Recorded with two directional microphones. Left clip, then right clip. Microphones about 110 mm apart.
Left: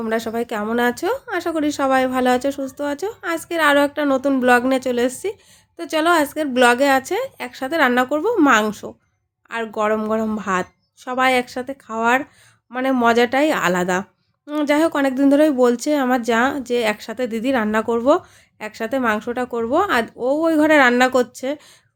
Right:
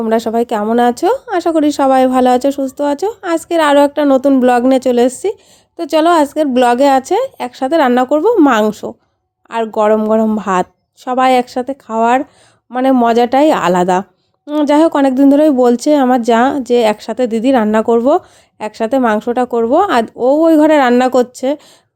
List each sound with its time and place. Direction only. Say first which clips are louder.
0.1 s speech: right 9 dB; 50° right (ahead or behind)